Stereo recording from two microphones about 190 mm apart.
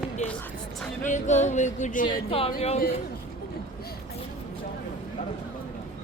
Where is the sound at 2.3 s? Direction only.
30° left (ahead or behind).